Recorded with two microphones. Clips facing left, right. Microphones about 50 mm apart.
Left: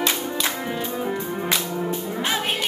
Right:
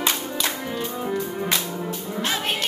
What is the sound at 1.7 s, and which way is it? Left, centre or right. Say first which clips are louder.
Whip: left 4 dB; centre.